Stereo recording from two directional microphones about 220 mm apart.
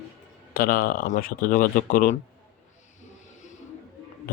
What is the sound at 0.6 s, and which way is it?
Speech, 40° left (ahead or behind).